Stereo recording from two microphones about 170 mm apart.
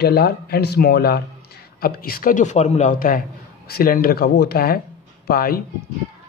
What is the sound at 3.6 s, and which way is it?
Speech, 65° left (ahead or behind).